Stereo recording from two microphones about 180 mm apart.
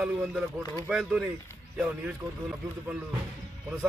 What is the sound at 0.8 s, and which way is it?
A man's voice, 5° right (ahead or behind).